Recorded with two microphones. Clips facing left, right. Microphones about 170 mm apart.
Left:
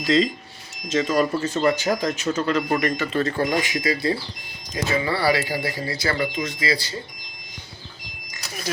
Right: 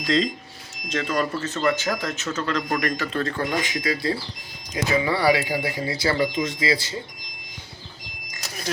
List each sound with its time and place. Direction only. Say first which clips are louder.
0.0 s speech: left 3 dB; centre (ahead or behind)
4.7 s speech: right 1 dB; 15° right (ahead or behind)